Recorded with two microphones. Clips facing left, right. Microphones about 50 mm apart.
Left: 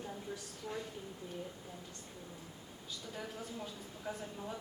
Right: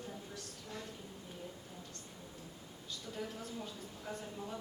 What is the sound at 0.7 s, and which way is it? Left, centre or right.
Speech, left.